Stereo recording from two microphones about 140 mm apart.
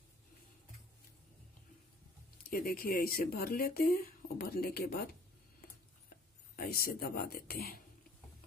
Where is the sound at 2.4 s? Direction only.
90° left.